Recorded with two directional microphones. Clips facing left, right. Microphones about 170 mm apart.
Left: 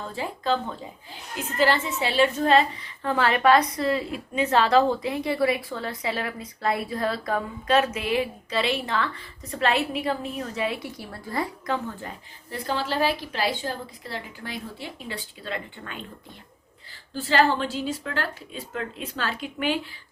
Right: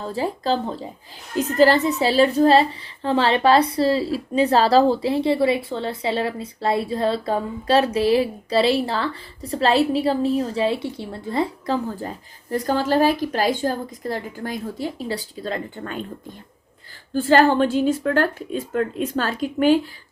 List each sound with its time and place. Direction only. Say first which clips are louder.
0.0 s a woman's voice: right 6 dB; 35° right (ahead or behind)
17.2 s speech: right 6 dB; 50° right (ahead or behind)